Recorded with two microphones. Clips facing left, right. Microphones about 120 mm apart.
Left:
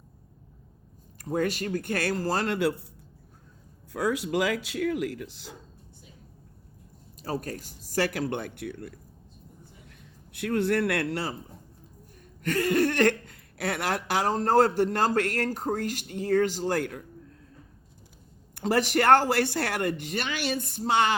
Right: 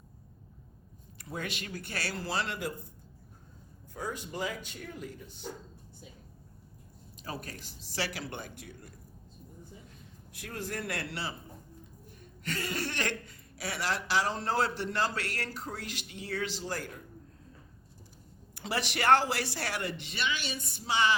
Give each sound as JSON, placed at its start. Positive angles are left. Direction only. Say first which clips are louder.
{"t": 1.2, "sound": "a woman's voice", "louder": "left 11 dB", "side_deg": 45}
{"t": 2.6, "sound": "speech", "louder": "left 11 dB", "side_deg": 75}
{"t": 3.9, "sound": "speech", "louder": "left 11 dB", "side_deg": 90}
{"t": 7.2, "sound": "a woman's voice", "louder": "left 9 dB", "side_deg": 40}
{"t": 10.3, "sound": "speech", "louder": "left 13 dB", "side_deg": 65}
{"t": 12.4, "sound": "a woman's voice", "louder": "left 12 dB", "side_deg": 50}
{"t": 18.5, "sound": "a woman's voice", "louder": "left 10 dB", "side_deg": 45}